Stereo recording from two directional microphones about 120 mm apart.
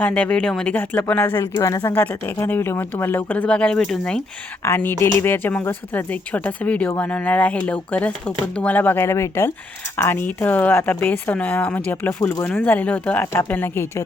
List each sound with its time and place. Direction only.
0.0 s a woman's voice: 10° left (ahead or behind)
1.6 s speech: 30° left (ahead or behind)
1.9 s a woman's voice: 15° left (ahead or behind)
4.6 s a woman's voice: 20° left (ahead or behind)